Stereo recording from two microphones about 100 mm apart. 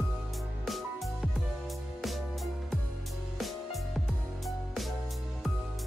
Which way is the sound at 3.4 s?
Centre (ahead or behind).